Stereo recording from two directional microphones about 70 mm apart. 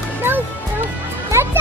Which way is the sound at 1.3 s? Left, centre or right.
Right.